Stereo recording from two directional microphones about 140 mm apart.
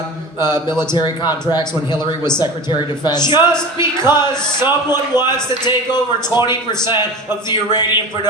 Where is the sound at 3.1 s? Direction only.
30° left (ahead or behind).